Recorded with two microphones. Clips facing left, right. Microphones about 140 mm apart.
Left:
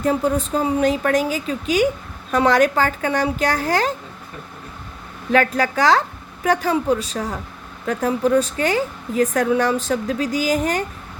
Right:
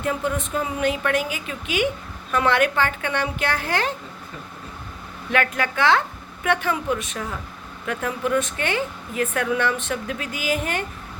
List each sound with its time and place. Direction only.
0.0 s a woman's voice: 35° left (ahead or behind)
5.3 s a woman's voice: 35° left (ahead or behind)